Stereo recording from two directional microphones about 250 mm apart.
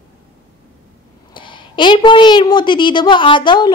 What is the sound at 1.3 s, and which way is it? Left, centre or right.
A woman's voice, centre.